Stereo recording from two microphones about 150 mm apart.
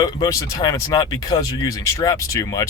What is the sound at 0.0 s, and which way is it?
Speech, 25° left (ahead or behind).